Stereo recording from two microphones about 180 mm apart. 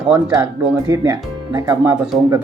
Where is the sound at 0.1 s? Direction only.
20° right (ahead or behind).